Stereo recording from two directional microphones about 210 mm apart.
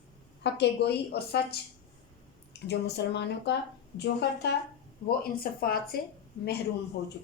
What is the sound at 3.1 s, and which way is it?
A woman's voice, 55° left (ahead or behind).